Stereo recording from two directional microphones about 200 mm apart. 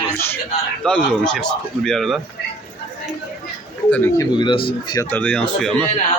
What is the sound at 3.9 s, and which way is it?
Speech, 10° left (ahead or behind).